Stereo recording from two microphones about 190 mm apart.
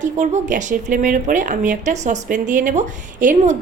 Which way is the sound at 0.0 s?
40° right (ahead or behind).